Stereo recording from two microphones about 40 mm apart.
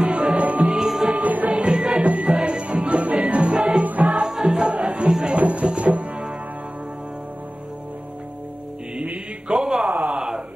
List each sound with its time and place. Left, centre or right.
0.0 s music: right
0.4 s music: right
0.7 s music: centre
1.1 s music: right
1.5 s music: right
3.5 s music: right
3.8 s music: right
4.3 s music: centre
5.3 s music: right
9.5 s a sound: centre
9.9 s a sound: right